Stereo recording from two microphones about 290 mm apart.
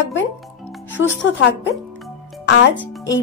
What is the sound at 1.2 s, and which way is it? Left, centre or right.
Speech, left.